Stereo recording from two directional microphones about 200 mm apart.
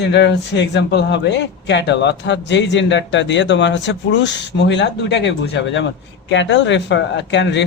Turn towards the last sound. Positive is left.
turn(degrees=60)  # may be behind; listen again after turning